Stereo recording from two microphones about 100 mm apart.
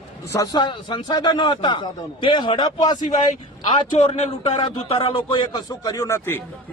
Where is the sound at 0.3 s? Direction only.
35° left (ahead or behind).